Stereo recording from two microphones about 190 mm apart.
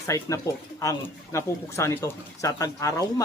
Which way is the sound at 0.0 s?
15° left (ahead or behind).